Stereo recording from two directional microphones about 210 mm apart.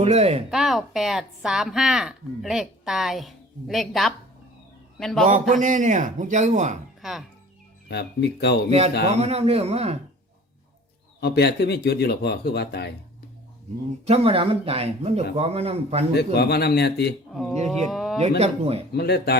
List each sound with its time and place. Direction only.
0.0 s speech: 30° right (ahead or behind)
0.5 s a woman's voice: centre (ahead or behind)
5.2 s a man's voice: 35° right (ahead or behind)
7.0 s speech: centre (ahead or behind)
7.9 s speech: 50° left (ahead or behind)
9.1 s speech: 30° right (ahead or behind)
11.2 s speech: 50° left (ahead or behind)
14.0 s speech: 30° right (ahead or behind)
16.1 s speech: 50° left (ahead or behind)
17.9 s a sound: centre (ahead or behind)
18.2 s speech: 30° right (ahead or behind)
18.9 s speech: 50° left (ahead or behind)